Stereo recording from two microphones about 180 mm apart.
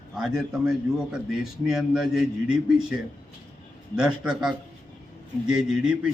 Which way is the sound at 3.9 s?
5° right (ahead or behind).